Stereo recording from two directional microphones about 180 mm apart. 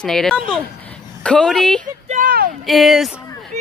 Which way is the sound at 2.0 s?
45° right (ahead or behind).